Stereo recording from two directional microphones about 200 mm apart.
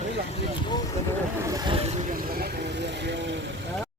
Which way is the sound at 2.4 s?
60° right (ahead or behind).